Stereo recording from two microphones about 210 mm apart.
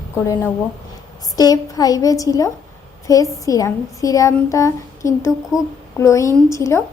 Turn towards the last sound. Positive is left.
turn(degrees=15)  # may be behind; listen again after turning